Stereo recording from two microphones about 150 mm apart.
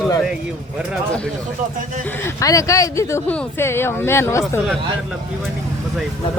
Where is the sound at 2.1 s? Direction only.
15° left (ahead or behind).